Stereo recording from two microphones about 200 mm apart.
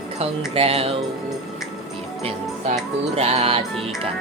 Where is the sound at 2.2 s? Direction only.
30° right (ahead or behind).